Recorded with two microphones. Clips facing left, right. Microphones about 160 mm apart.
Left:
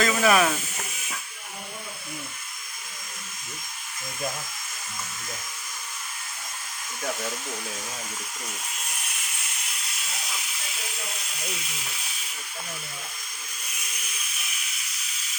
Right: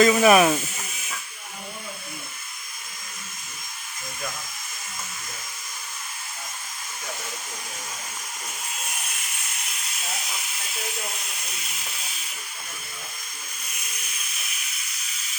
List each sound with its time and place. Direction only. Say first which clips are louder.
0.0 s speech: right 5 dB; 20° right (ahead or behind)